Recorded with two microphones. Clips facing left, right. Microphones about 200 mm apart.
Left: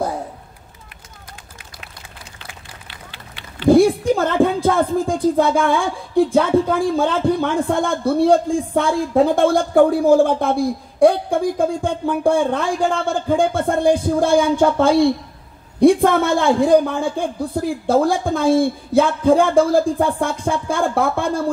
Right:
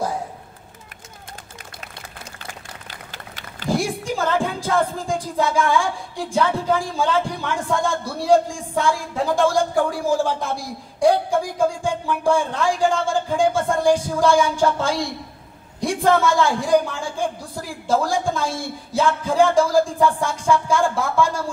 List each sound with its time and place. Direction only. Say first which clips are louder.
2.9 s run: right 1 dB; 45° right (ahead or behind)
3.6 s speech: left 11 dB; 60° left (ahead or behind)